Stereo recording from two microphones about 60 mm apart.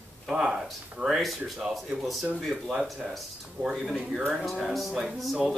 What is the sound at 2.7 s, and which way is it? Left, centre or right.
Speech, centre.